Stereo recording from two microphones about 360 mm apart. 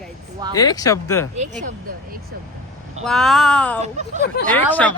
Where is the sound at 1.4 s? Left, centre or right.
Right.